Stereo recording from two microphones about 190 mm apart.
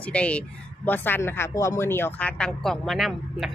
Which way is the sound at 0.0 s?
5° left (ahead or behind).